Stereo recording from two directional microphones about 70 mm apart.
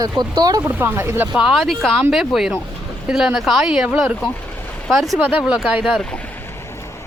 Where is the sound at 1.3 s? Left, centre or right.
Centre.